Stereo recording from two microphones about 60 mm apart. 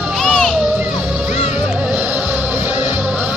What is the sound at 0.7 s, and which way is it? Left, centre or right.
Music, right.